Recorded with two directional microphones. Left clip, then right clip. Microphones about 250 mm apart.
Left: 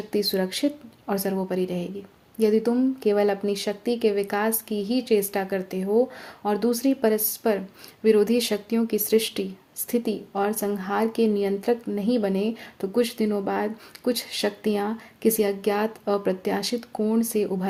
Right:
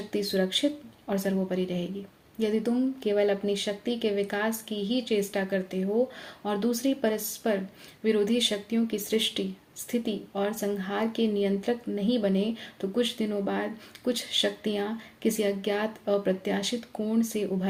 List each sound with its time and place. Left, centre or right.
0.1 s speech: left